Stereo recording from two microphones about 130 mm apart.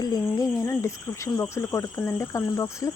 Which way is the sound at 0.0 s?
30° left (ahead or behind).